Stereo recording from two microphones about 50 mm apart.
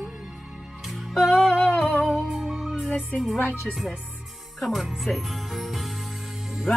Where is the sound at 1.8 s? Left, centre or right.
Left.